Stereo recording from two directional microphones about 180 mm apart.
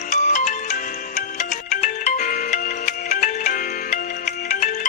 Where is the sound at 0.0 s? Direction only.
45° left (ahead or behind).